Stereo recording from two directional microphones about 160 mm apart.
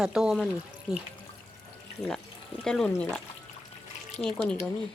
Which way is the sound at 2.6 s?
5° left (ahead or behind).